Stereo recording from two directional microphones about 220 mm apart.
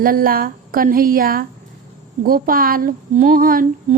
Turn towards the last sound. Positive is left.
turn(degrees=-40)  # may be behind; listen again after turning